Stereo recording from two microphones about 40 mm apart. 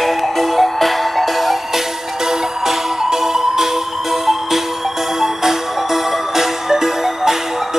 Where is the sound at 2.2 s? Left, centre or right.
Centre.